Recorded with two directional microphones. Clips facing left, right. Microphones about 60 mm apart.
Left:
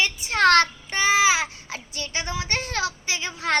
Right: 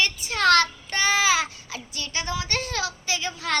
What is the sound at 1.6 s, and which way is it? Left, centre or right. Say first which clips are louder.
A woman's voice: left 1 dB; left.